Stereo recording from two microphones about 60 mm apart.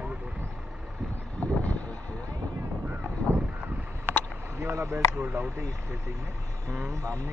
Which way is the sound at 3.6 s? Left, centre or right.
Right.